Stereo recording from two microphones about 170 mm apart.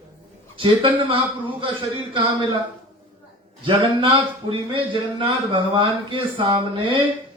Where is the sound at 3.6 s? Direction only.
30° right (ahead or behind).